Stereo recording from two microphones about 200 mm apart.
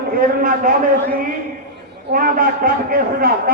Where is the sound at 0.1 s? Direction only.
45° right (ahead or behind).